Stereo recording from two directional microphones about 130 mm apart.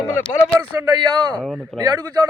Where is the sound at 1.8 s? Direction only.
35° right (ahead or behind).